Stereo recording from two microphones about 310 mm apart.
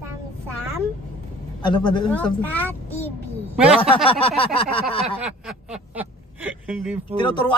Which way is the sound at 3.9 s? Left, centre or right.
Centre.